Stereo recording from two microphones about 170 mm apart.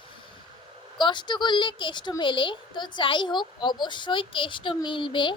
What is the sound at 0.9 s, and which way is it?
Speech, 25° left (ahead or behind).